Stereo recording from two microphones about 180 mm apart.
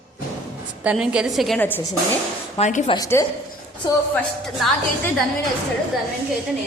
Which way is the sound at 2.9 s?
20° left (ahead or behind).